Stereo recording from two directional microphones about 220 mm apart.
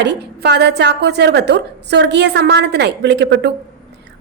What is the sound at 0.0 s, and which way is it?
A woman's voice, 50° right (ahead or behind).